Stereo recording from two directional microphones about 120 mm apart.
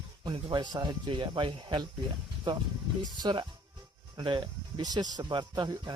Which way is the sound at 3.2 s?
35° right (ahead or behind).